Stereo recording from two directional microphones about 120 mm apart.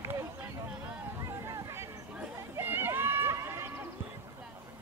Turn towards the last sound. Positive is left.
turn(degrees=-20)  # may be behind; listen again after turning